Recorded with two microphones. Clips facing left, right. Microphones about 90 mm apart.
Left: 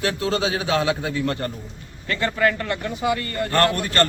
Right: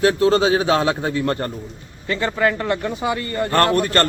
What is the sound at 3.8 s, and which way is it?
Speech, 40° right (ahead or behind).